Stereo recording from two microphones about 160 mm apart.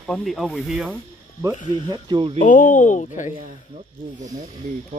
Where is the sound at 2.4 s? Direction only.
55° left (ahead or behind).